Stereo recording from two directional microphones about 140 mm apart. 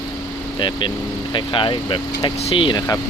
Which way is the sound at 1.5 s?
35° left (ahead or behind).